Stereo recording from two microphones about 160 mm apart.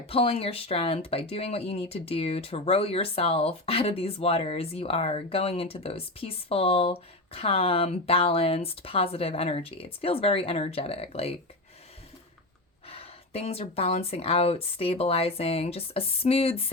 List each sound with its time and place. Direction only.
0.0 s speech: 35° left (ahead or behind)
12.9 s speech: 35° left (ahead or behind)